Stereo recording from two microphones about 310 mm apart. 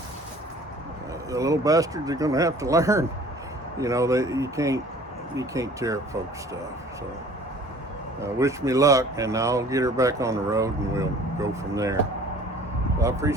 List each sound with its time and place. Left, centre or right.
1.3 s speech: centre
8.2 s speech: centre
13.0 s speech: centre